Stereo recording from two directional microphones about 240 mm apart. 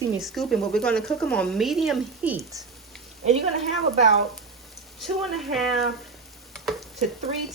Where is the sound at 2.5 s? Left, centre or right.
Centre.